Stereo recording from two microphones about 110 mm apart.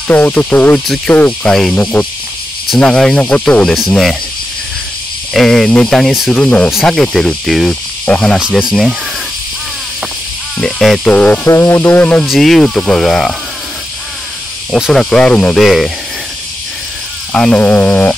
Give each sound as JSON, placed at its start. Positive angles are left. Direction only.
{"t": 0.1, "sound": "speech", "side_deg": 15}
{"t": 0.8, "sound": "speech", "side_deg": 0}
{"t": 1.1, "sound": "speech", "side_deg": 15}
{"t": 1.5, "sound": "speech", "side_deg": 5}
{"t": 1.8, "sound": "speech", "side_deg": 15}
{"t": 5.3, "sound": "speech", "side_deg": 5}
{"t": 8.0, "sound": "cricket", "side_deg": 10}
{"t": 8.4, "sound": "speech", "side_deg": -5}
{"t": 10.6, "sound": "speech", "side_deg": 0}
{"t": 11.1, "sound": "speech", "side_deg": 15}
{"t": 11.4, "sound": "speech", "side_deg": 25}
{"t": 12.3, "sound": "speech", "side_deg": 0}
{"t": 14.8, "sound": "speech", "side_deg": 5}
{"t": 17.3, "sound": "speech", "side_deg": 10}